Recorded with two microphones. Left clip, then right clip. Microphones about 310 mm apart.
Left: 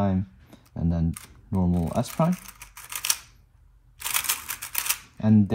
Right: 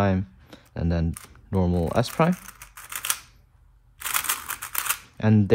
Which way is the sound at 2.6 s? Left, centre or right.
Centre.